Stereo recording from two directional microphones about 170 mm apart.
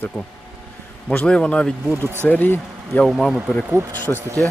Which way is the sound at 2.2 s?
10° left (ahead or behind).